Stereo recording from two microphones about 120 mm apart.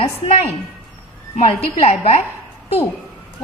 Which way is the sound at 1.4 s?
60° left (ahead or behind).